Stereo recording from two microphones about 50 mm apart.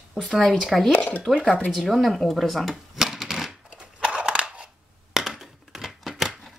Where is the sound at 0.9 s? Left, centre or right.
Left.